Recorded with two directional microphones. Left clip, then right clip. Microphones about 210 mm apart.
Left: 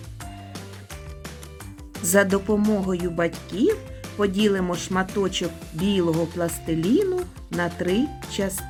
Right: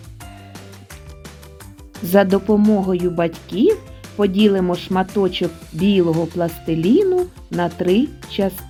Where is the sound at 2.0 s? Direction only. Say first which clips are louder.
Right 5 dB; 10° right (ahead or behind).